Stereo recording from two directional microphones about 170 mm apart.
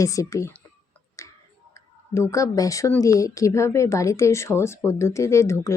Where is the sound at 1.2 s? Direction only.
20° left (ahead or behind).